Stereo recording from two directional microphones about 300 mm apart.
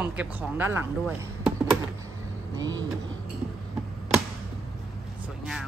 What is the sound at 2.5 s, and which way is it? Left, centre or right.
Speech, centre.